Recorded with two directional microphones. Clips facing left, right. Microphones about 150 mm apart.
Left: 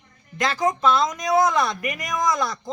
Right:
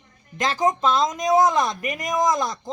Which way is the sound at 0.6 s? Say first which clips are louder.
Even; 20° right (ahead or behind).